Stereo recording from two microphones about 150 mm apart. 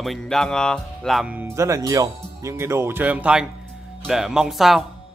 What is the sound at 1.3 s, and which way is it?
Speech, 15° right (ahead or behind).